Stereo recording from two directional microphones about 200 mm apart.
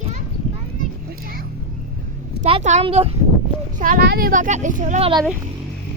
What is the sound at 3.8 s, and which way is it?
Speech, 45° right (ahead or behind).